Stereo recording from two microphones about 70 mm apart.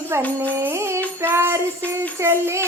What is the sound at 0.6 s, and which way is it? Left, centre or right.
Child singing, right.